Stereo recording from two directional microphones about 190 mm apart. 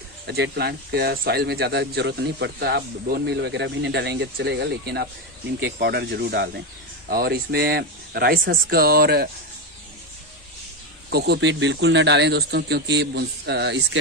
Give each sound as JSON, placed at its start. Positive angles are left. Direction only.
{"t": 0.3, "sound": "speech", "side_deg": -55}
{"t": 11.1, "sound": "speech", "side_deg": -60}